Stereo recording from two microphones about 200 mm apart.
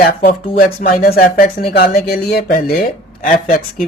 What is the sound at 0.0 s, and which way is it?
Speech, 45° left (ahead or behind).